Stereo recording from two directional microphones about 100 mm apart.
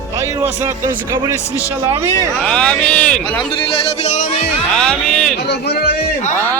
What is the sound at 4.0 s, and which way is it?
Speech, 90° left.